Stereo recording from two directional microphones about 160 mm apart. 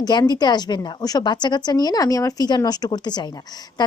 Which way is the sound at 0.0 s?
25° left (ahead or behind).